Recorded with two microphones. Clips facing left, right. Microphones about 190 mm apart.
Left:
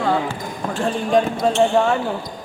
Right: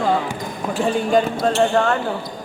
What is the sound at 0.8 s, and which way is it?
Speech, 5° right (ahead or behind).